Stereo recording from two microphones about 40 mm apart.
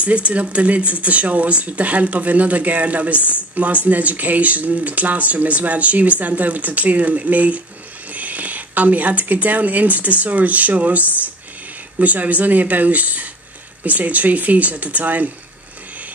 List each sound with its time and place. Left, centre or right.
0.0 s speech: right